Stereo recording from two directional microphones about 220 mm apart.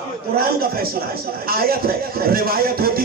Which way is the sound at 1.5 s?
40° right (ahead or behind).